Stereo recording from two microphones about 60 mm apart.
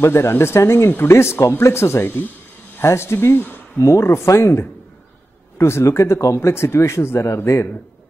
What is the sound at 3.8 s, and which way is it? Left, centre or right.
Speech, left.